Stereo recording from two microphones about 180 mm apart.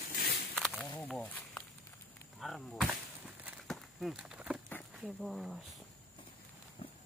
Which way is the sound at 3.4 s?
Centre (ahead or behind).